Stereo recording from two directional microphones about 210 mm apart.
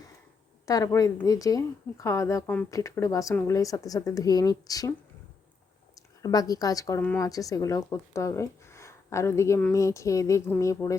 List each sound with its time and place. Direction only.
0.6 s a woman's voice: 15° left (ahead or behind)
6.2 s a woman's voice: 15° left (ahead or behind)